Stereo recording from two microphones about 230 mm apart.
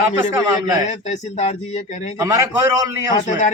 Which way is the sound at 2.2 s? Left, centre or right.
Centre.